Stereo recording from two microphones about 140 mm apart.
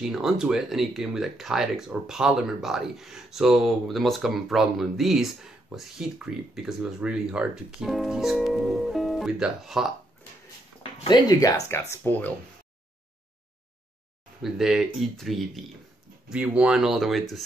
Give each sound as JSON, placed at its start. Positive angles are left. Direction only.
{"t": 0.0, "sound": "speech", "side_deg": -5}
{"t": 10.8, "sound": "speech", "side_deg": 30}
{"t": 14.4, "sound": "speech", "side_deg": -5}